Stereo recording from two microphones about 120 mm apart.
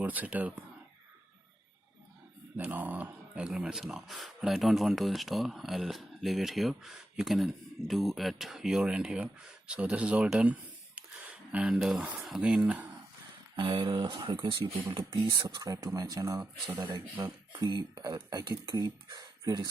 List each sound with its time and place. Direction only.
0.0 s speech: 15° right (ahead or behind)
2.6 s speech: 15° right (ahead or behind)
13.6 s speech: 40° right (ahead or behind)
16.4 s speech: 10° right (ahead or behind)
16.8 s speech: 35° right (ahead or behind)